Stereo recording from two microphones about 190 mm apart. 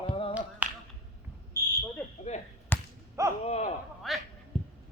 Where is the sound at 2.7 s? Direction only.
10° left (ahead or behind).